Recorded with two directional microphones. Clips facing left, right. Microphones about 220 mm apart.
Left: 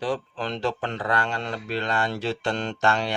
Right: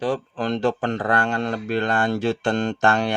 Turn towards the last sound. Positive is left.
turn(degrees=-50)  # may be behind; listen again after turning